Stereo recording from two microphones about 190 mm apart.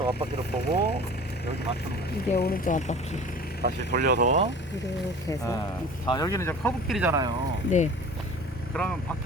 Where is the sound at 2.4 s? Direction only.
45° left (ahead or behind).